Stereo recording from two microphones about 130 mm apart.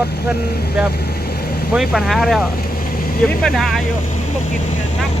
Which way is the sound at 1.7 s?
Centre (ahead or behind).